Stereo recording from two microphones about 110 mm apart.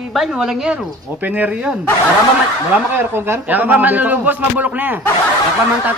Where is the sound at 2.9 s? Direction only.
20° right (ahead or behind).